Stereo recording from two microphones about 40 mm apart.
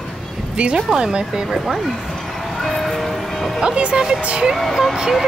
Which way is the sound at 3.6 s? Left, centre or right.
Right.